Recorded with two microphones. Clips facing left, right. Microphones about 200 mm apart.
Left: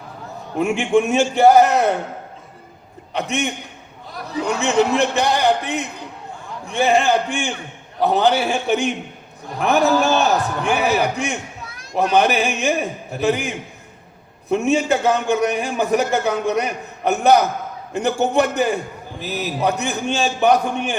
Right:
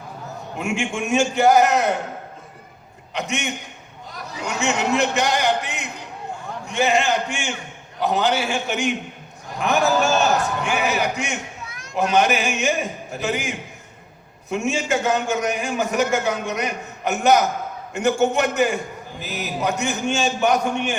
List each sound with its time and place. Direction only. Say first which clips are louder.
0.6 s a man's voice: left 8 dB; 35° left (ahead or behind)
3.1 s a man's voice: left 4 dB; 35° left (ahead or behind)
14.5 s a man's voice: left 5 dB; 35° left (ahead or behind)